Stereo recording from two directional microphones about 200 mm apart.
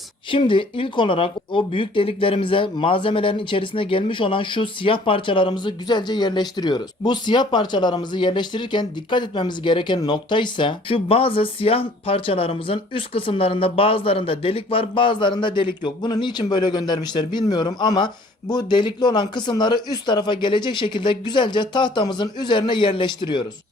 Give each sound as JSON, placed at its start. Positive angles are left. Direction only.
{"t": 0.3, "sound": "speech", "side_deg": 25}